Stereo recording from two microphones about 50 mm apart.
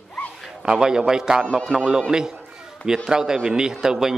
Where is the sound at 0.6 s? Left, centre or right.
Centre.